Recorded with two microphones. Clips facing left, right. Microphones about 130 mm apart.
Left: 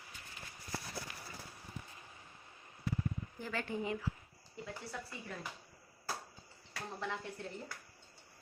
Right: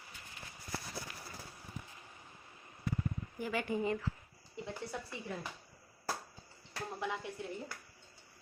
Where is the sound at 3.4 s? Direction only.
10° right (ahead or behind).